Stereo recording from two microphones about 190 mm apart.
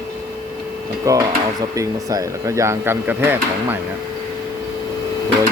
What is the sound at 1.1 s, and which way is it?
Speech, 15° right (ahead or behind).